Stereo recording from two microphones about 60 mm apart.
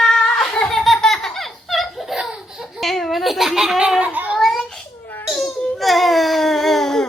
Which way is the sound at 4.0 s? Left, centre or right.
Right.